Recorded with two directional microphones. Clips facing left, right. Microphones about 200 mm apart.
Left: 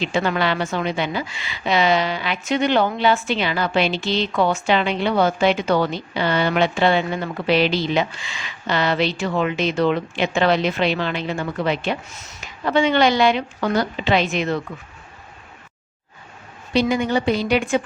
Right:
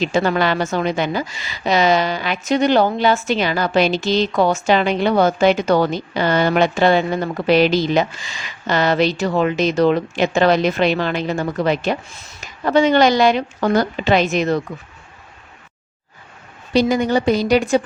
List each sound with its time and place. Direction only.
0.0 s a woman's voice: 40° right (ahead or behind)
16.9 s a woman's voice: 40° right (ahead or behind)